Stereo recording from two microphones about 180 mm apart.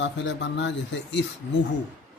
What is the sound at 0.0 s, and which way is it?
A man's voice, 80° left.